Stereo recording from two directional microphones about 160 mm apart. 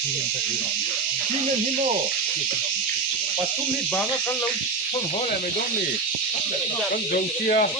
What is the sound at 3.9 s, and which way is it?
Speech, 5° left (ahead or behind).